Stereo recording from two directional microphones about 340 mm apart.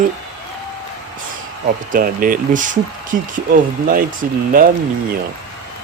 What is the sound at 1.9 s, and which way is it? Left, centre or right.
Speech, right.